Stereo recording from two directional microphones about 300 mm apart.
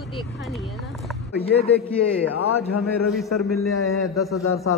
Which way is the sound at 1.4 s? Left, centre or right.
Centre.